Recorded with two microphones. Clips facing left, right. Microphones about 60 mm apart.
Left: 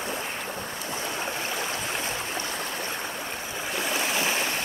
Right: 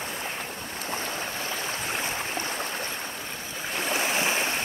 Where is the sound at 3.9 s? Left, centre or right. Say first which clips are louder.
Right 2 dB; right.